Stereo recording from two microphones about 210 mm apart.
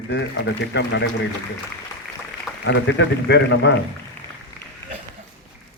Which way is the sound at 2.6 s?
60° left (ahead or behind).